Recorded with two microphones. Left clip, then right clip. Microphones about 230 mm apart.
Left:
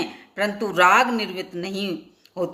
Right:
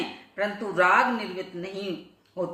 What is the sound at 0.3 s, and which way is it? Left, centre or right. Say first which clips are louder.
A woman's voice: left 5 dB; left.